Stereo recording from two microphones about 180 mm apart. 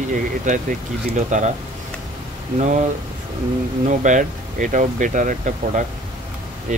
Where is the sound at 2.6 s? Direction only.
40° right (ahead or behind).